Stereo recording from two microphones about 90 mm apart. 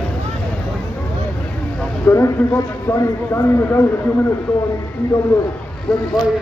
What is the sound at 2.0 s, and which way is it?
A man's voice, 30° left (ahead or behind).